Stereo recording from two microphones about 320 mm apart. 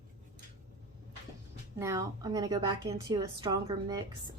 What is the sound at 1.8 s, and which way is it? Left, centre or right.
A woman's voice, centre.